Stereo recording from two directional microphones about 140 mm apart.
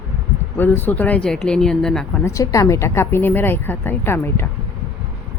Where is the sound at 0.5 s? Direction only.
15° left (ahead or behind).